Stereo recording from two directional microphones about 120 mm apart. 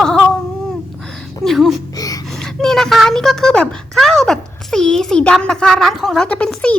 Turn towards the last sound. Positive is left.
turn(degrees=10)  # may be behind; listen again after turning